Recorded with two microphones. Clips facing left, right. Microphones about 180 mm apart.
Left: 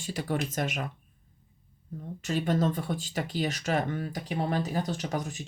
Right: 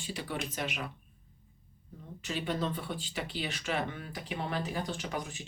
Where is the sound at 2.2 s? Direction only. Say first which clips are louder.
Left 6 dB; 45° left (ahead or behind).